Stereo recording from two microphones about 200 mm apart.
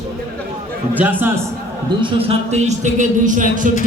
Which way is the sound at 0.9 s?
10° right (ahead or behind).